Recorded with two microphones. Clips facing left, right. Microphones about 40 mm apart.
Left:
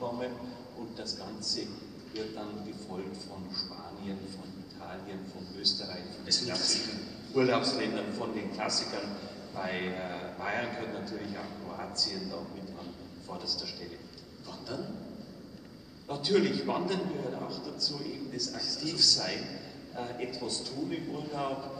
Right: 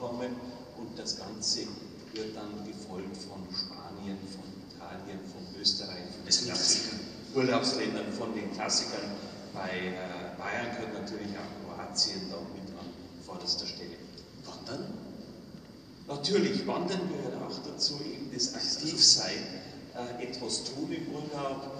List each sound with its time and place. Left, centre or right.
0.0 s a sound: centre
0.9 s a man's voice: centre
5.6 s a man's voice: centre
11.9 s a man's voice: centre
16.1 s a man's voice: centre